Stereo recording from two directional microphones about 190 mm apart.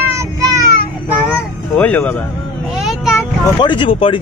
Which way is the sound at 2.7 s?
Centre (ahead or behind).